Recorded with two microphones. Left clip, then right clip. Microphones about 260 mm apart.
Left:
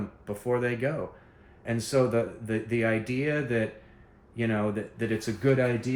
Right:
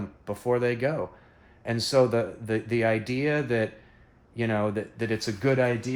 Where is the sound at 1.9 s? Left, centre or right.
Right.